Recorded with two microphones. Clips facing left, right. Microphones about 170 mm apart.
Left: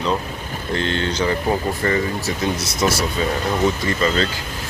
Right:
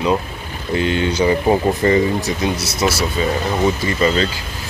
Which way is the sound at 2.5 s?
10° right (ahead or behind).